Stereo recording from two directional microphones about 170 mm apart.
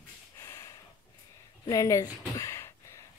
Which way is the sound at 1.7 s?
20° left (ahead or behind).